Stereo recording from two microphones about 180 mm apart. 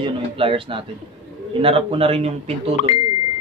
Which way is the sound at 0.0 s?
30° right (ahead or behind).